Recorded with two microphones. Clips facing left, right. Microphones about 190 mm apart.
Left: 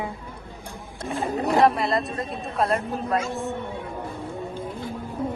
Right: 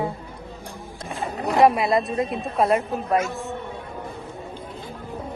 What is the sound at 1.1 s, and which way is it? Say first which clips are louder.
Speech: left 3 dB; centre (ahead or behind).